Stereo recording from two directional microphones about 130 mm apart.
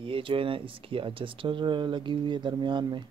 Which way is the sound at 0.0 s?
40° right (ahead or behind).